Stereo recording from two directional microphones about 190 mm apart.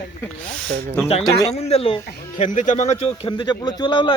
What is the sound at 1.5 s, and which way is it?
Speech, 35° left (ahead or behind).